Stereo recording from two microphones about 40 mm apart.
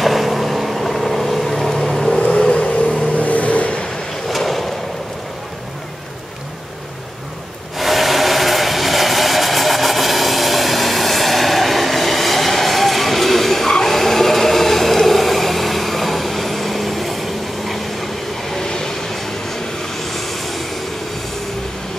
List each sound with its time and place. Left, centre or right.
0.0 s vehicle: centre
3.2 s vehicle: left
4.3 s a sound: centre
7.7 s vehicle: centre
18.5 s vehicle: centre